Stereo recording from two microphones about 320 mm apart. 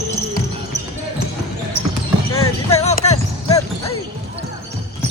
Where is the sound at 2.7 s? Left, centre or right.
Centre.